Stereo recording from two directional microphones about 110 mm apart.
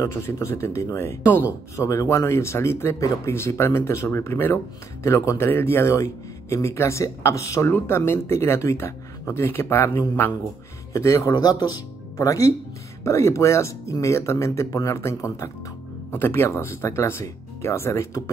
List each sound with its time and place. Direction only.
0.0 s speech: 25° left (ahead or behind)